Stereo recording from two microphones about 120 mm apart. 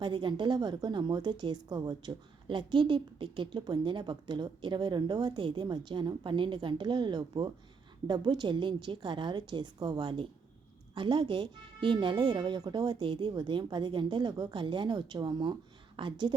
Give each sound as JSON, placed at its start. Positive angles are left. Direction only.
{"t": 0.0, "sound": "a woman's voice", "side_deg": -40}